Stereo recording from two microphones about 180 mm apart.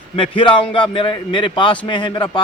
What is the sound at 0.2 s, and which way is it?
A man's voice, 30° left (ahead or behind).